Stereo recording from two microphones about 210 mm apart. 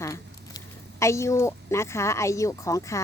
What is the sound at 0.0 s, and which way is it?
A woman's voice, 15° left (ahead or behind).